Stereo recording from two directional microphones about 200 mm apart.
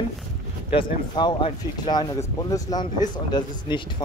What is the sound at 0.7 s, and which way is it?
Speech, 25° left (ahead or behind).